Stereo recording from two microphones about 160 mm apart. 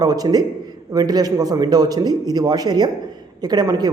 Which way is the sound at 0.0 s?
25° right (ahead or behind).